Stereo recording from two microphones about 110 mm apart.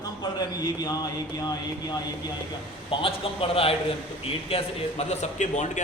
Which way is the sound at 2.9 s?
55° left (ahead or behind).